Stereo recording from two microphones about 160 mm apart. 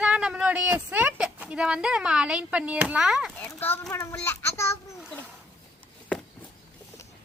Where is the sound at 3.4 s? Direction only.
15° left (ahead or behind).